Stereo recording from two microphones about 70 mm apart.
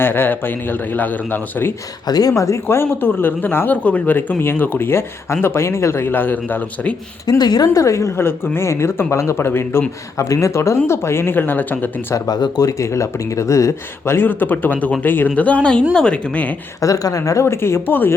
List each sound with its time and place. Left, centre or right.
0.0 s a man's voice: left
2.0 s a woman's voice: left
2.6 s speech: left
7.3 s a woman's voice: left
7.7 s speech: left
10.2 s speech: left
12.1 s a man's voice: left; by 16.6 s centre
16.8 s speech: left